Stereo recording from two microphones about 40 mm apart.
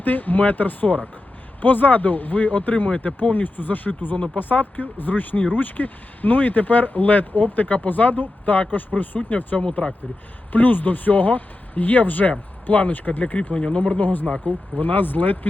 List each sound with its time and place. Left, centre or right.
0.0 s speech: left
9.8 s speech: left
10.5 s speech: left
13.5 s speech: left